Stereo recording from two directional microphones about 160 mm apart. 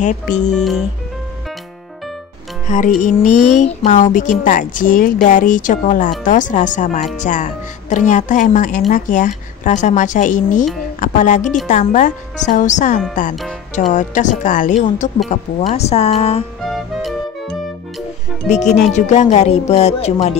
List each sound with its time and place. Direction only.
0.5 s speech: 5° left (ahead or behind)
3.0 s a woman's voice: 55° left (ahead or behind); by 16.4 s 40° left (ahead or behind)
16.6 s music: centre (ahead or behind)
18.5 s a woman's voice: 45° left (ahead or behind)